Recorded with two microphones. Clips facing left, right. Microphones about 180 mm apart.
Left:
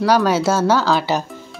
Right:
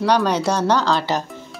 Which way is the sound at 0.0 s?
5° left (ahead or behind).